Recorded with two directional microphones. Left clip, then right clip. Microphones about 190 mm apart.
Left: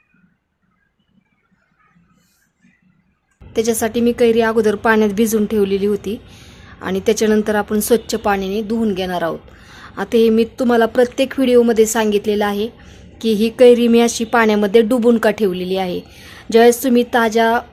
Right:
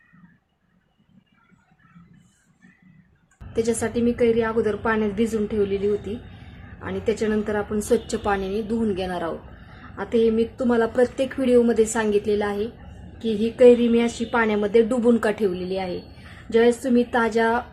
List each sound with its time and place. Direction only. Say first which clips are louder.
3.5 s a woman's voice: left 6 dB; 35° left (ahead or behind)